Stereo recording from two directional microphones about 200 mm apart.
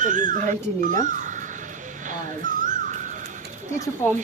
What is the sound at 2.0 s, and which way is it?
Dog, 40° right (ahead or behind).